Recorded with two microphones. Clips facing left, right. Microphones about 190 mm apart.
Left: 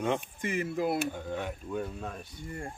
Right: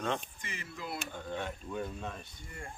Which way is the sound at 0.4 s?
50° left (ahead or behind).